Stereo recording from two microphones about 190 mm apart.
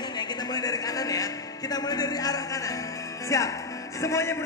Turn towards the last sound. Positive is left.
turn(degrees=15)  # may be behind; listen again after turning